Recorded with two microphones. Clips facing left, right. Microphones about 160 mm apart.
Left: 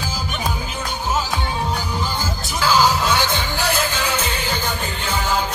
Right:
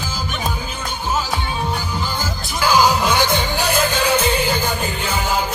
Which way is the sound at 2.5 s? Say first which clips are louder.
Right 2 dB; 15° right (ahead or behind).